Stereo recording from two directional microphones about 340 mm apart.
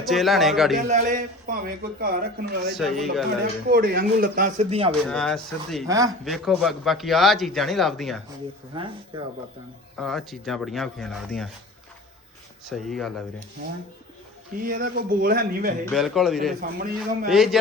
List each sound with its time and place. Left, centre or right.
0.0 s speech: centre
0.9 s speech: right
2.7 s speech: centre
3.4 s speech: right
5.0 s speech: centre
5.9 s speech: centre
8.7 s speech: centre
10.0 s speech: centre
12.6 s speech: centre
14.6 s speech: right
15.9 s speech: centre
16.6 s speech: right
17.0 s speech: centre